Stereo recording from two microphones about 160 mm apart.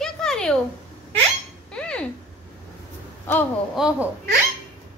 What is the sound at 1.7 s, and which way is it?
Chink, 5° left (ahead or behind).